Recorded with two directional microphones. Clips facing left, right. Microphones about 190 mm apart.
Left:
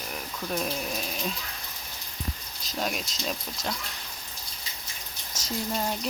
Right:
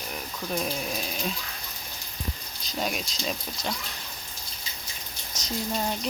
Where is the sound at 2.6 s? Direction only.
Centre (ahead or behind).